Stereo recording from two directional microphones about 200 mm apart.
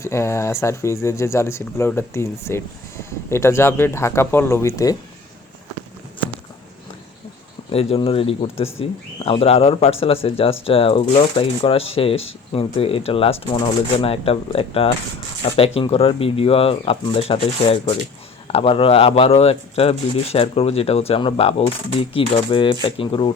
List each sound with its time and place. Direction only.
0.0 s speech: 15° left (ahead or behind)
7.7 s speech: 30° left (ahead or behind)